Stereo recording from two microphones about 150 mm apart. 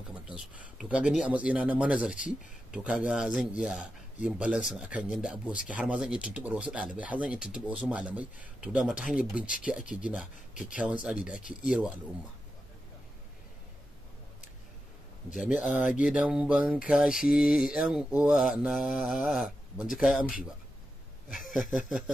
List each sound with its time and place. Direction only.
0.1 s speech: 10° right (ahead or behind)
2.7 s mantra: 5° right (ahead or behind)
5.7 s speech: 5° right (ahead or behind)
9.8 s a sound: 60° left (ahead or behind)
10.5 s speech: 60° left (ahead or behind)
10.8 s mantra: 5° right (ahead or behind)
15.6 s mantra: centre (ahead or behind)
21.5 s a sound: 60° left (ahead or behind)
21.8 s speech: 5° right (ahead or behind)